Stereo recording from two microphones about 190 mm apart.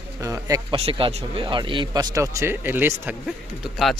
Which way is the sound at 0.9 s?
30° right (ahead or behind).